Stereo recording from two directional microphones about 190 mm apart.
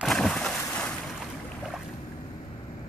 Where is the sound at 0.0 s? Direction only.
Centre (ahead or behind).